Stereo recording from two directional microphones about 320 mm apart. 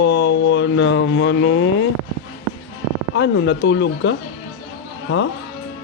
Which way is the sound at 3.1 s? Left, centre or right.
Left.